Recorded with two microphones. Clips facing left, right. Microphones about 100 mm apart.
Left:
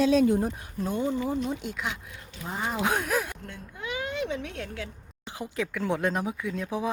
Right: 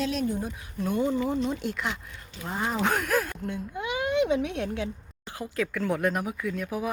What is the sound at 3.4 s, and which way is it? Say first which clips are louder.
A woman's voice: right 6 dB; 15° right (ahead or behind).